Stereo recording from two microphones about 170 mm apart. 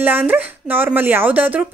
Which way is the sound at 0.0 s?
10° right (ahead or behind).